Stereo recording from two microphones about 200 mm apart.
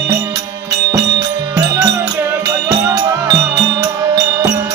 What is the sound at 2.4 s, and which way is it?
Music, 20° right (ahead or behind).